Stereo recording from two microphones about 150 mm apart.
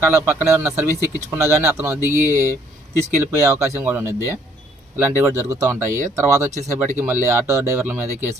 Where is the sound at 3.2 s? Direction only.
20° right (ahead or behind).